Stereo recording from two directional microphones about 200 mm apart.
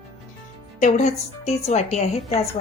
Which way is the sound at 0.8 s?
35° left (ahead or behind).